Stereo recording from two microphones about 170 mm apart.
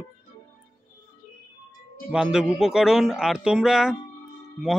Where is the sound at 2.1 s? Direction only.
5° right (ahead or behind).